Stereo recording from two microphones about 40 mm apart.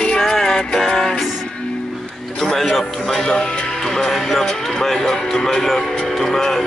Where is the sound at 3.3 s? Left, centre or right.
Centre.